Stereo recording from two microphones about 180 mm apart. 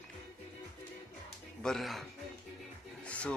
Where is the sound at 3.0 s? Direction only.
5° left (ahead or behind).